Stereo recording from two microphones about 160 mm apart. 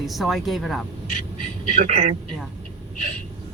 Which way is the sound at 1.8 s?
50° right (ahead or behind).